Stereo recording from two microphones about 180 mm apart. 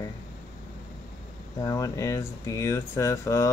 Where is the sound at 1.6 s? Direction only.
20° left (ahead or behind).